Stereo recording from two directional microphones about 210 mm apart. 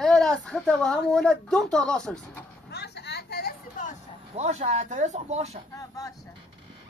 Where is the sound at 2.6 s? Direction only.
50° left (ahead or behind).